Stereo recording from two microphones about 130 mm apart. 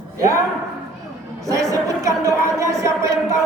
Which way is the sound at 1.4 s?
25° right (ahead or behind).